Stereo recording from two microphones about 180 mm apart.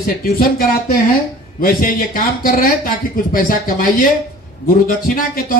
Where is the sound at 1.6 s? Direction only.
55° left (ahead or behind).